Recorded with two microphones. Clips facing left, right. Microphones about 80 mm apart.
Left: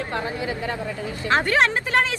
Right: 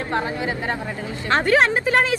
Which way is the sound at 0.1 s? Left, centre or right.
Right.